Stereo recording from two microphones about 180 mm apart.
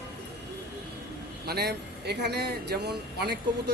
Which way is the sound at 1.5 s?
65° right (ahead or behind).